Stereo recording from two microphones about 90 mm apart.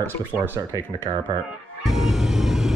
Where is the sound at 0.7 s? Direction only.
45° right (ahead or behind).